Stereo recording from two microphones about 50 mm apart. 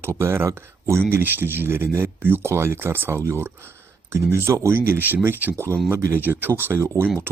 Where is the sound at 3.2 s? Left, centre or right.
Right.